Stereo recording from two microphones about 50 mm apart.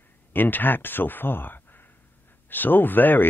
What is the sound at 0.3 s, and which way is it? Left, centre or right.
Speech, left.